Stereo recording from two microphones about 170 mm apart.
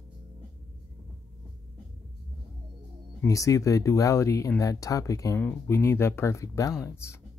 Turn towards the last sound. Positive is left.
turn(degrees=15)  # may be behind; listen again after turning